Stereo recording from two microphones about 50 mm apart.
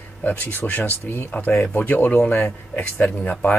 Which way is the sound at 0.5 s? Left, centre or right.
Left.